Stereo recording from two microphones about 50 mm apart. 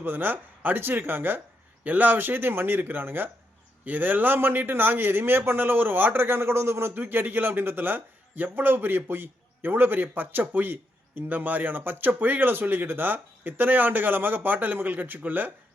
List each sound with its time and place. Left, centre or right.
0.0 s a man's voice: right
6.9 s a man's voice: right